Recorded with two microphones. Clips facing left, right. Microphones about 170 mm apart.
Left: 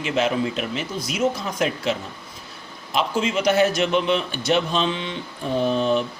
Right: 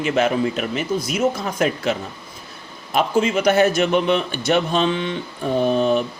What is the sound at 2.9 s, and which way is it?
A man's voice, 50° right (ahead or behind).